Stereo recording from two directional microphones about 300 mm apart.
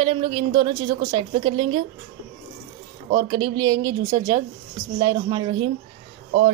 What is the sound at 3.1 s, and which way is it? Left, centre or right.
Speech, centre.